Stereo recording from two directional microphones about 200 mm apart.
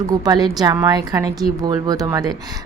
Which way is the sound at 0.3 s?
20° right (ahead or behind).